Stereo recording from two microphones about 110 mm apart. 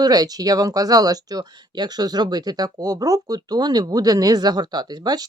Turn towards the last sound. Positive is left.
turn(degrees=-40)  # may be behind; listen again after turning